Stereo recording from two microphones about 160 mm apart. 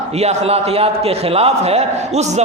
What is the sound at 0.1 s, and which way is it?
A man's voice, 40° right (ahead or behind).